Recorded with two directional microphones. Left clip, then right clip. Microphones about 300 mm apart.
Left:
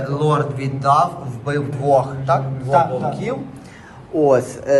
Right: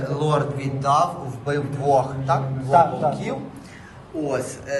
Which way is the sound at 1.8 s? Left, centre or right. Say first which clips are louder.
Left 4 dB; centre.